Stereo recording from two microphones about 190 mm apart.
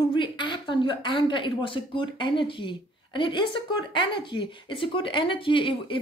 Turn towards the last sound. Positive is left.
turn(degrees=25)  # may be behind; listen again after turning